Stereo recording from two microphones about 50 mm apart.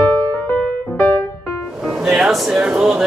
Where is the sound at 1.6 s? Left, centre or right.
Centre.